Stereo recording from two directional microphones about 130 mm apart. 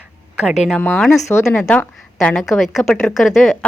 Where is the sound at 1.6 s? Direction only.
10° left (ahead or behind).